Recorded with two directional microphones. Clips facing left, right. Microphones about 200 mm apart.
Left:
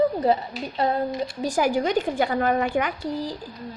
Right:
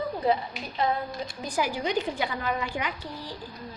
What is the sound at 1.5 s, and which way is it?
A child's voice, 50° left (ahead or behind).